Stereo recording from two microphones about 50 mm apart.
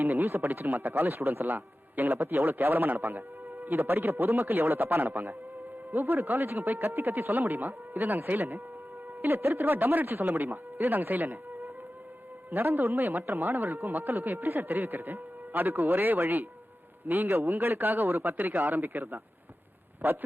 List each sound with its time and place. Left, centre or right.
0.0 s a man's voice: right
6.3 s speech: right
6.6 s a man's voice: right